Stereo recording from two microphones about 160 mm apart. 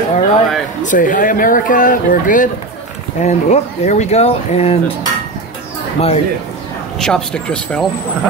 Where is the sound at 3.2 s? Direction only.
45° left (ahead or behind).